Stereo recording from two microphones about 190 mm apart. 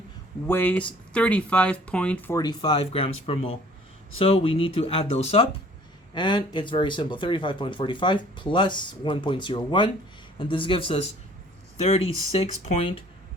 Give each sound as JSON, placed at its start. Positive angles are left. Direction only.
{"t": 0.4, "sound": "speech", "side_deg": 10}